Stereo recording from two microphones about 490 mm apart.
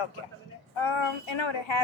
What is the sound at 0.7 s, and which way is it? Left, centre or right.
A woman's voice, left.